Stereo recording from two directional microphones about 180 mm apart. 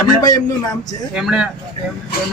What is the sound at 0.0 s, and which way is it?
Speech, 20° left (ahead or behind).